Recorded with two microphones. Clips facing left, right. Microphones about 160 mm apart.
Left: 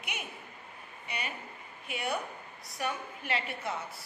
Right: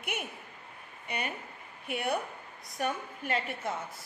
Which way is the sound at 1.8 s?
55° right (ahead or behind).